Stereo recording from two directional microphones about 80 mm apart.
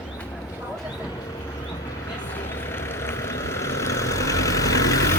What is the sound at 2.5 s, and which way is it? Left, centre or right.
Vehicle, left.